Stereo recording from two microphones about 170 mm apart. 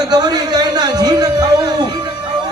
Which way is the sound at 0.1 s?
25° right (ahead or behind).